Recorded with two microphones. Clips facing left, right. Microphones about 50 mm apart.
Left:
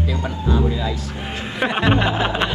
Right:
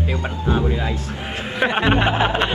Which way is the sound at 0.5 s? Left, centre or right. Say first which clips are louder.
Even; right.